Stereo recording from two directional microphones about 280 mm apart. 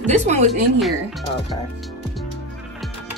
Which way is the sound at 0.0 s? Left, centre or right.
Right.